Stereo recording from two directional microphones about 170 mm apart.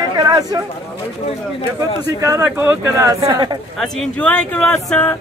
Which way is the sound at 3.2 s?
25° right (ahead or behind).